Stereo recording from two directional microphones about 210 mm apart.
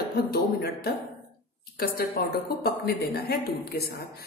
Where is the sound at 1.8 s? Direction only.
45° left (ahead or behind).